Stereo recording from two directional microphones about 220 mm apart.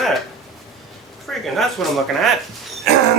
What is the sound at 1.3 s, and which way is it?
Speech, centre (ahead or behind).